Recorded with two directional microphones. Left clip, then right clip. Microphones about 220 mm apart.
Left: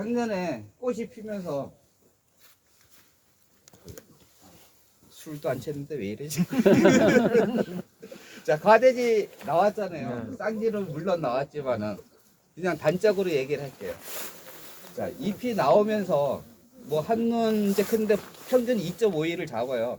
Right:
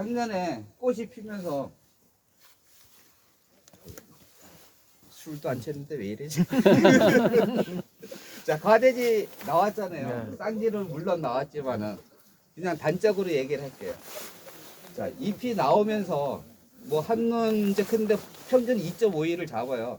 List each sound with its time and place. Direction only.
0.1 s speech: 20° left (ahead or behind)
3.7 s a sound: 15° left (ahead or behind)
5.1 s speech: 15° left (ahead or behind)
6.4 s speech: 45° right (ahead or behind)
7.4 s a sound: 40° right (ahead or behind)
8.4 s speech: 15° left (ahead or behind)
10.1 s speech: 45° right (ahead or behind)
10.6 s speech: 15° left (ahead or behind)